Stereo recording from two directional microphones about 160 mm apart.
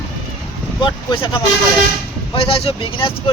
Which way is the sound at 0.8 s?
30° left (ahead or behind).